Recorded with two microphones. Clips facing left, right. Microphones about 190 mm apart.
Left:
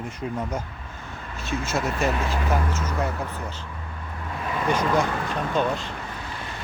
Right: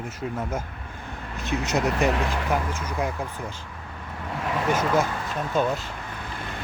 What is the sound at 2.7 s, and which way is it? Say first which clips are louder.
Speech: left 1 dB; 10° right (ahead or behind).